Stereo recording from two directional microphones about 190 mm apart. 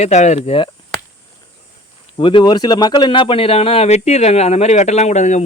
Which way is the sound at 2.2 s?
25° left (ahead or behind).